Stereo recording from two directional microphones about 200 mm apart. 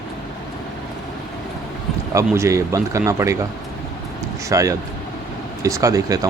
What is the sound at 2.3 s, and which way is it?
Speech, 15° right (ahead or behind).